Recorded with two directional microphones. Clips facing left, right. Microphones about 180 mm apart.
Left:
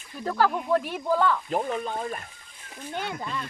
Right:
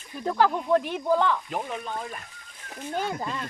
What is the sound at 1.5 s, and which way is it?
Speech, 35° left (ahead or behind).